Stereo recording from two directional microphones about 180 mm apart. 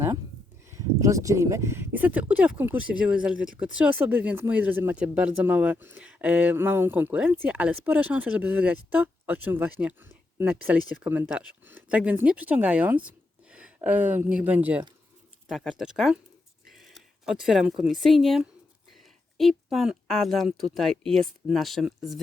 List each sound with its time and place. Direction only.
0.8 s speech: 15° right (ahead or behind)
15.4 s speech: centre (ahead or behind)